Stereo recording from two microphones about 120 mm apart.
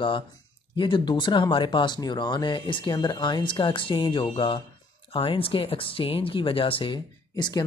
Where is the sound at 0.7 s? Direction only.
45° left (ahead or behind).